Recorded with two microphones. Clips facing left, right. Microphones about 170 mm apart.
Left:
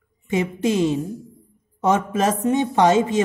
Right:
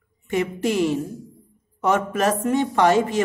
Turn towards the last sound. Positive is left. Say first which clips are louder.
# left 1 dB
turn(degrees=20)  # may be behind; listen again after turning